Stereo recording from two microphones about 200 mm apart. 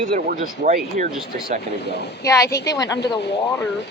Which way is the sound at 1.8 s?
55° left (ahead or behind).